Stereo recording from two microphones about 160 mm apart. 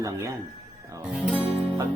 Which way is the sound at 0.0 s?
20° right (ahead or behind).